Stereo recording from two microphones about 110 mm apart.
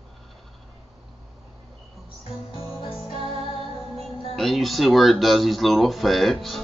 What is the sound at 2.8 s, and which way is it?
Music, 60° left (ahead or behind).